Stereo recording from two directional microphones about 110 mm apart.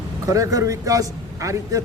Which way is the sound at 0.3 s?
30° right (ahead or behind).